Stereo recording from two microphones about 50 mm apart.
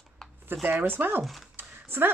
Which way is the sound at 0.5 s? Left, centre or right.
Right.